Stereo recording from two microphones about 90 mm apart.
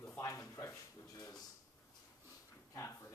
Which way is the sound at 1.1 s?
45° left (ahead or behind).